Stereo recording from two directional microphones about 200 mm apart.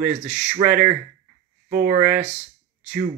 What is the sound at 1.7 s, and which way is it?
Speech, 45° right (ahead or behind).